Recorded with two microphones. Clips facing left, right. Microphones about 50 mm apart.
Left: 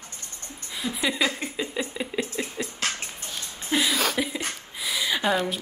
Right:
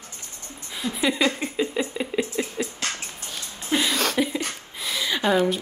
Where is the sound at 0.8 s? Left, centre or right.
Centre.